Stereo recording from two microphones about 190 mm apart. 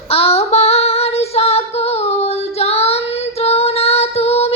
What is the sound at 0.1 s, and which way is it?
Female singing, 30° left (ahead or behind).